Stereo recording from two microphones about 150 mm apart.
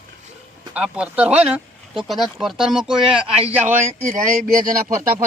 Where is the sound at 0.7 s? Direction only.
5° right (ahead or behind).